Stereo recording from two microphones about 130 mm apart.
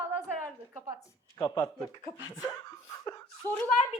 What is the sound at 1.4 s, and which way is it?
Speech, 30° left (ahead or behind).